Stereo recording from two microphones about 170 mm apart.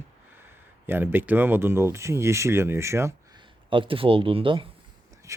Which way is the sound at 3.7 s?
30° right (ahead or behind).